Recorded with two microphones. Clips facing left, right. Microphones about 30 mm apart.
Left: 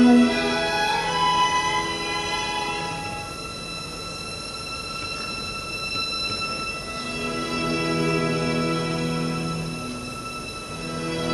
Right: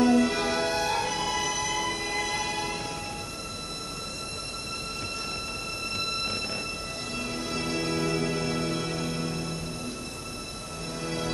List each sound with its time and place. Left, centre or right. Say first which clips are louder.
0.0 s music: left 6 dB; left
5.9 s train: left 3 dB; centre
7.2 s music: left 5 dB; left
11.0 s music: left 5 dB; left